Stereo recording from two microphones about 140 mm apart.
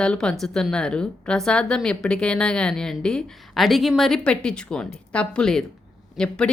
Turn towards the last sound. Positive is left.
turn(degrees=5)  # may be behind; listen again after turning